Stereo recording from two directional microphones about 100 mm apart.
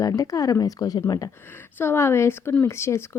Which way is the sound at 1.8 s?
25° left (ahead or behind).